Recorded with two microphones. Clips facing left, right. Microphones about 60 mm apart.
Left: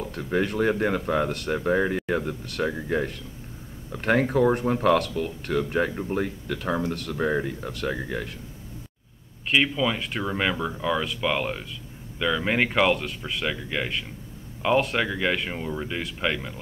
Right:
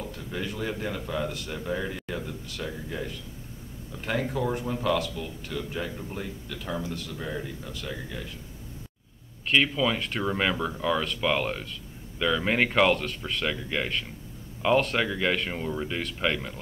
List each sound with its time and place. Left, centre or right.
0.0 s speech: left
9.5 s speech: centre